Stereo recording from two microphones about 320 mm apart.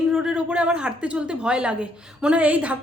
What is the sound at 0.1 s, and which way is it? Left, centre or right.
A woman's voice, centre.